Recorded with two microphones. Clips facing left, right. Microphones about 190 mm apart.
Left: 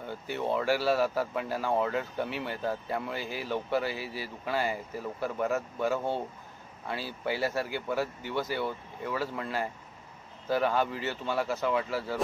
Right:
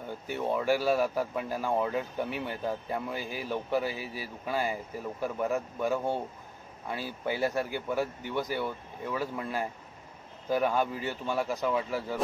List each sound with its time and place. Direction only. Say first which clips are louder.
0.1 s speech: even; 15° right (ahead or behind)